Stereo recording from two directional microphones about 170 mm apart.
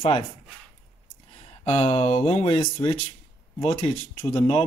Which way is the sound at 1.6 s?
35° left (ahead or behind).